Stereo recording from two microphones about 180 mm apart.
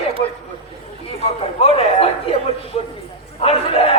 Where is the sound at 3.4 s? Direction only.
30° left (ahead or behind).